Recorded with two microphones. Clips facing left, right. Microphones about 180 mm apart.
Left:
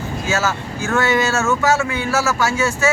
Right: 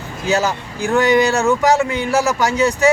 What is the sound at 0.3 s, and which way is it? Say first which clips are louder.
Speech: right 3 dB; 15° right (ahead or behind).